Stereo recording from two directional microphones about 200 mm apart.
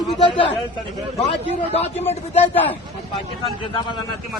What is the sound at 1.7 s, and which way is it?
Speech, 30° left (ahead or behind).